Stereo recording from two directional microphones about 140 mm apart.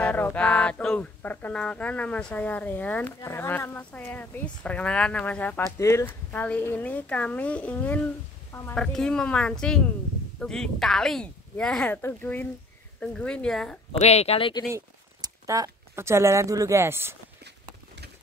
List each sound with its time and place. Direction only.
0.0 s a sound: 10° left (ahead or behind)
8.7 s speech: 5° left (ahead or behind)
12.0 s a sound: 15° left (ahead or behind)
13.0 s speech: 5° left (ahead or behind)
13.9 s speech: 50° left (ahead or behind)
15.2 s speech: 25° right (ahead or behind)